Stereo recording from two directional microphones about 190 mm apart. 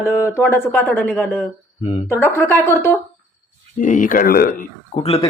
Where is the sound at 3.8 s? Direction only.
45° left (ahead or behind).